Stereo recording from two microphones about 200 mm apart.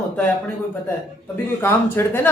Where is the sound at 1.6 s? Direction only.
10° left (ahead or behind).